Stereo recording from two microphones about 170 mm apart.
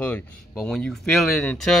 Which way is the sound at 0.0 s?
5° left (ahead or behind).